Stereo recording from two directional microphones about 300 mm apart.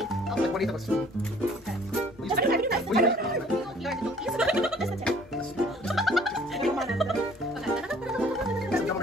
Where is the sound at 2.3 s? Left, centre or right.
Right.